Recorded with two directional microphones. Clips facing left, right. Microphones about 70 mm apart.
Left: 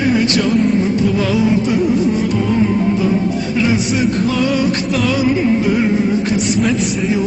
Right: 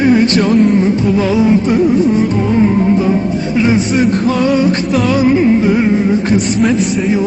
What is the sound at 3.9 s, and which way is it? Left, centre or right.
Music, right.